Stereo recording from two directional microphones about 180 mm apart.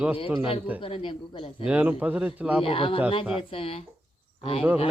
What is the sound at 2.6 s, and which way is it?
Speech, 30° left (ahead or behind).